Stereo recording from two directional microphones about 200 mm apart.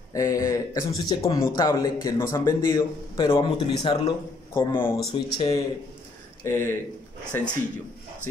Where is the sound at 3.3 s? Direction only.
25° left (ahead or behind).